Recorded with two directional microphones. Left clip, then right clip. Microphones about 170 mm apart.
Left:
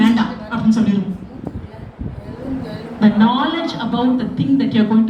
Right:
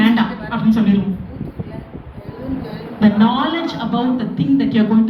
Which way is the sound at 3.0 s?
20° right (ahead or behind).